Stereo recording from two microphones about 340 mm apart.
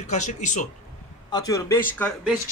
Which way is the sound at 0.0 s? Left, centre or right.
Left.